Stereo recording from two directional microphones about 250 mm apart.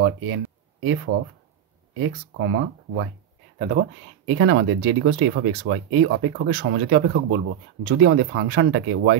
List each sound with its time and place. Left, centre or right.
0.0 s a sound: right
2.0 s speech: right
3.5 s speech: right
4.3 s speech: right